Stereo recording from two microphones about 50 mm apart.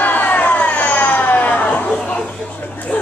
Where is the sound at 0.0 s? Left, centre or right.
Left.